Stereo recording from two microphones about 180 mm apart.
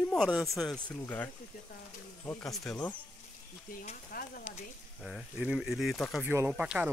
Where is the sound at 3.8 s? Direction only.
50° left (ahead or behind).